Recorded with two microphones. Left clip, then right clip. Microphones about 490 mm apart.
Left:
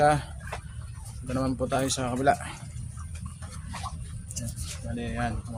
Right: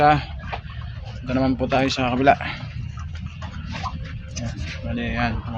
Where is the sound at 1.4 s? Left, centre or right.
Left.